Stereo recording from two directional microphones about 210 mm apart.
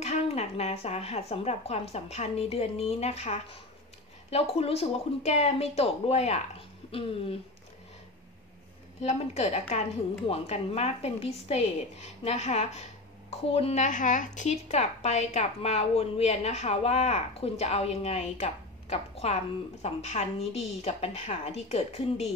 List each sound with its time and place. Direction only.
0.0 s speech: 30° left (ahead or behind)
9.0 s speech: 30° left (ahead or behind)